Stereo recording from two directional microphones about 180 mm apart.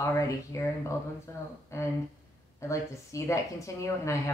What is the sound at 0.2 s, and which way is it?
Speech, 15° left (ahead or behind).